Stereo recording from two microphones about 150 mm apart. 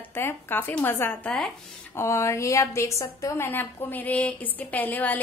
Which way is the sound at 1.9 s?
20° left (ahead or behind).